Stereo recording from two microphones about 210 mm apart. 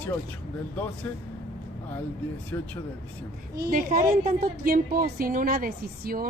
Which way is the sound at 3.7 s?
40° right (ahead or behind).